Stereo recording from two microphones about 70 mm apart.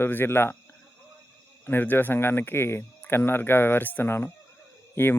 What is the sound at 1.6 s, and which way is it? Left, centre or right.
Speech, left.